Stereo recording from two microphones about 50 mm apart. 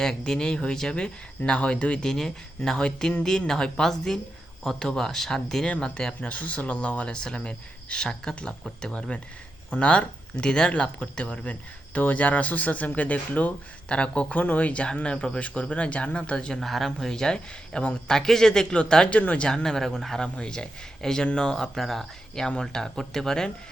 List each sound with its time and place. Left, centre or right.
0.0 s speech: centre
6.2 s speech: left
9.6 s speech: left
16.6 s speech: centre
20.2 s speech: centre